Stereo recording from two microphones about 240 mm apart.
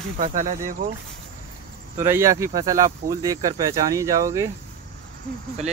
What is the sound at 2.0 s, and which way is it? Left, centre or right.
Speech, centre.